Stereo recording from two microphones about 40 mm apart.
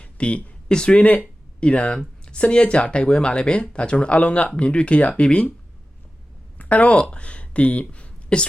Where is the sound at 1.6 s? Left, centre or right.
Left.